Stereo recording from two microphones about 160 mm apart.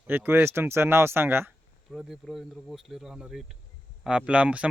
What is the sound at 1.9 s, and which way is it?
Speech, centre (ahead or behind).